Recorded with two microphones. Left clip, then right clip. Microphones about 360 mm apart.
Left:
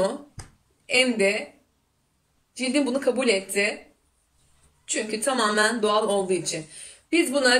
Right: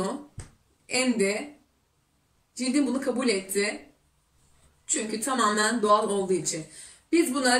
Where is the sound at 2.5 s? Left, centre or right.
Centre.